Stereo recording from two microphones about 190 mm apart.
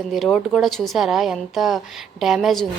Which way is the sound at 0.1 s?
Centre (ahead or behind).